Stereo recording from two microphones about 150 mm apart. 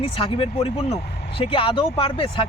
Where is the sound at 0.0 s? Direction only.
35° left (ahead or behind).